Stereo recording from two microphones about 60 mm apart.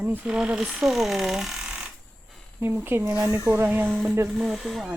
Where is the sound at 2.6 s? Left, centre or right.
Right.